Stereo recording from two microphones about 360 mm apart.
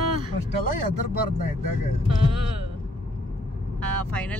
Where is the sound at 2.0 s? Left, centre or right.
Right.